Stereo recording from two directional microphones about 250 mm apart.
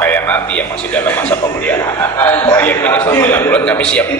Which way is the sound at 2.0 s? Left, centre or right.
Centre.